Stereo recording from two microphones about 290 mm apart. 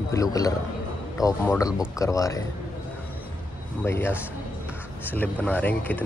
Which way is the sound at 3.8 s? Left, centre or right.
Centre.